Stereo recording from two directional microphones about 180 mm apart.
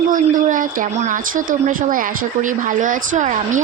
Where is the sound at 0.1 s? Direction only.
45° right (ahead or behind).